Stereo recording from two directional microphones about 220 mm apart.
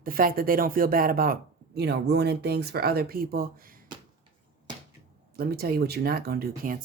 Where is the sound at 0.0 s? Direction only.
40° right (ahead or behind).